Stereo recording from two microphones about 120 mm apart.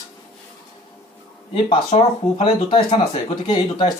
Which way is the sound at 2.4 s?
50° left (ahead or behind).